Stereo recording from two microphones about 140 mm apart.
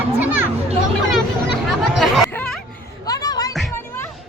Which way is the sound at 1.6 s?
Centre (ahead or behind).